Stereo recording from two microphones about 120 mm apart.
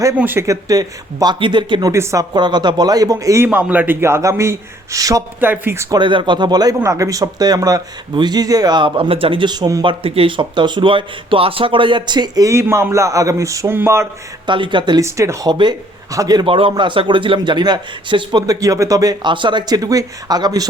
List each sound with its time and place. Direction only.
0.2 s speech: 15° right (ahead or behind)
0.4 s a man's voice: 30° right (ahead or behind)
1.9 s a man's voice: 25° right (ahead or behind)
2.3 s a man's voice: 35° right (ahead or behind)
5.4 s a man's voice: 15° right (ahead or behind)
6.0 s a man's voice: 40° right (ahead or behind)
9.8 s a man's voice: 45° right (ahead or behind); by 14.1 s 20° right (ahead or behind)
14.4 s a man's voice: 40° right (ahead or behind)
15.0 s a man's voice: 25° right (ahead or behind)
15.4 s a man's voice: 40° right (ahead or behind)
16.5 s a man's voice: 50° right (ahead or behind); by 20.7 s 35° right (ahead or behind)